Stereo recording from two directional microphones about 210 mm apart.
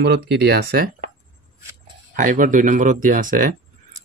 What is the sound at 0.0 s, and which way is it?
Speech, 55° right (ahead or behind).